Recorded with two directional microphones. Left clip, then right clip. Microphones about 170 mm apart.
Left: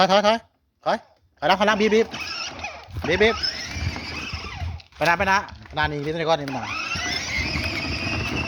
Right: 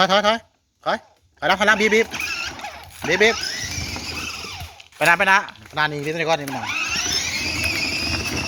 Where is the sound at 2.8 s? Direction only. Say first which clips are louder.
Right 2 dB; 10° left (ahead or behind).